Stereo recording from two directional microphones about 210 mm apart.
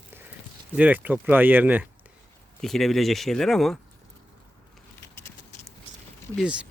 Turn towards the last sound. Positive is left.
turn(degrees=-5)  # may be behind; listen again after turning